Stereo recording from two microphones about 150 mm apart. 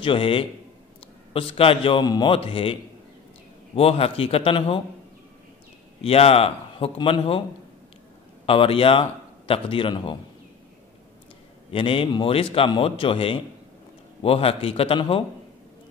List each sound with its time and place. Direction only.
0.0 s a man's voice: 35° left (ahead or behind)
5.9 s a man's voice: 40° left (ahead or behind)
8.5 s a man's voice: 40° left (ahead or behind)
11.7 s a man's voice: 35° left (ahead or behind)